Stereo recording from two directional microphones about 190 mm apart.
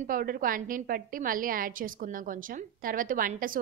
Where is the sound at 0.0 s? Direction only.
45° right (ahead or behind).